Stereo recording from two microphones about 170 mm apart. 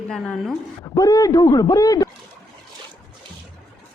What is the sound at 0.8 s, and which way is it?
Speech, 20° left (ahead or behind).